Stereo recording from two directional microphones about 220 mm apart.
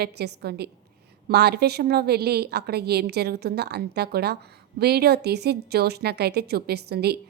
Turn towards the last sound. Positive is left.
turn(degrees=-45)  # may be behind; listen again after turning